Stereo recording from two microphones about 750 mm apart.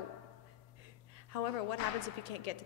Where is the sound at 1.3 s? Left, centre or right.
Left.